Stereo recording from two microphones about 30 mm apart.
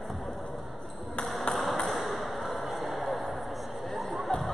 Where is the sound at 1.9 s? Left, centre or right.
Centre.